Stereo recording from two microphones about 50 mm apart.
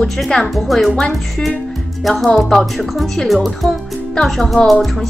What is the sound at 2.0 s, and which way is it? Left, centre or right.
Speech, centre.